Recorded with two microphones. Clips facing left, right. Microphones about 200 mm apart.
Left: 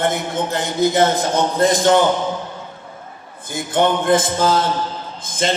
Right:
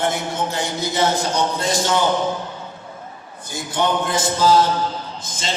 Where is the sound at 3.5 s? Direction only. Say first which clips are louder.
Left 4 dB; 55° left (ahead or behind).